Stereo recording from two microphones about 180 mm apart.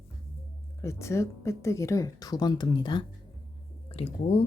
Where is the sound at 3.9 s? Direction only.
35° left (ahead or behind).